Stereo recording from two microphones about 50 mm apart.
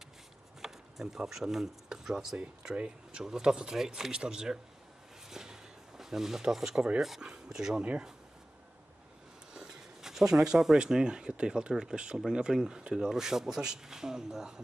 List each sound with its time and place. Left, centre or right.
0.6 s speech: centre
2.6 s speech: right
5.3 s a sound: centre
7.2 s speech: centre
9.5 s speech: centre